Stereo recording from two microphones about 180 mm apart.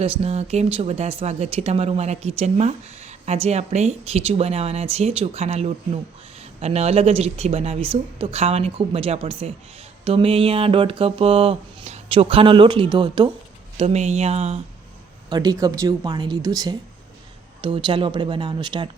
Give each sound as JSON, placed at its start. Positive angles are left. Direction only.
{"t": 0.0, "sound": "speech", "side_deg": -35}
{"t": 13.7, "sound": "speech", "side_deg": -35}
{"t": 15.3, "sound": "speech", "side_deg": -20}